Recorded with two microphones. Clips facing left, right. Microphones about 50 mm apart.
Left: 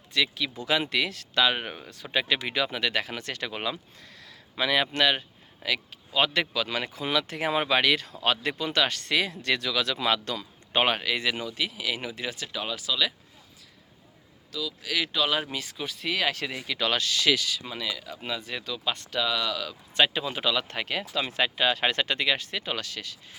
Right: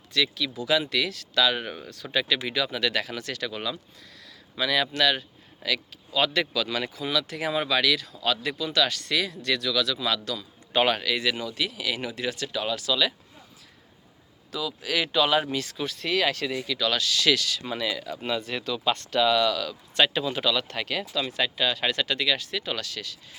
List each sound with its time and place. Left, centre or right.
0.1 s speech: left
10.8 s speech: left; by 13.1 s centre
14.5 s speech: centre
16.3 s speech: left
17.2 s speech: centre
17.7 s speech: centre; by 23.1 s left